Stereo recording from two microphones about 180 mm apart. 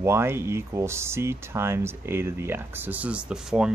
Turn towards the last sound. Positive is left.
turn(degrees=-5)  # may be behind; listen again after turning